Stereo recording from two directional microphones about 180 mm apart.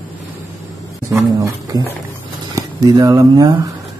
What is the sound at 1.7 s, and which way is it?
Speech, 20° right (ahead or behind).